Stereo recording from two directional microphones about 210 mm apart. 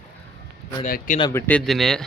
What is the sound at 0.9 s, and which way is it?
Speech, 40° left (ahead or behind).